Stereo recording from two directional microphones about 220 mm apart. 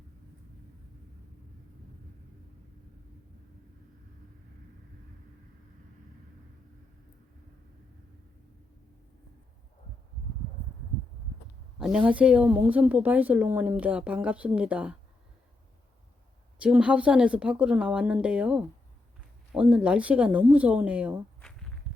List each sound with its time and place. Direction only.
11.8 s a woman's voice: 5° right (ahead or behind)
16.6 s a woman's voice: 5° right (ahead or behind)
21.9 s a sound: centre (ahead or behind)